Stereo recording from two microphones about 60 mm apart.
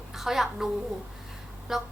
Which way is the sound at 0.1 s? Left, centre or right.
Centre.